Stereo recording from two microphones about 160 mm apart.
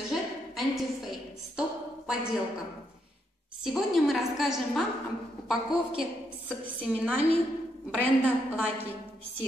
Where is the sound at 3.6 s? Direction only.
Centre (ahead or behind).